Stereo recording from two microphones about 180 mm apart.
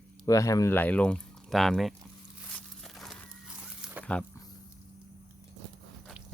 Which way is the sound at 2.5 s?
Centre (ahead or behind).